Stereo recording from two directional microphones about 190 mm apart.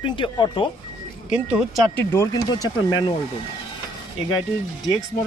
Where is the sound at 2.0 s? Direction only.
15° left (ahead or behind).